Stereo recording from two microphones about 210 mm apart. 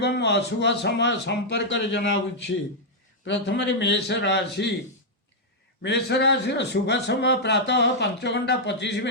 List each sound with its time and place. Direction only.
0.0 s a man's voice: 55° left (ahead or behind)
5.8 s a man's voice: 55° left (ahead or behind)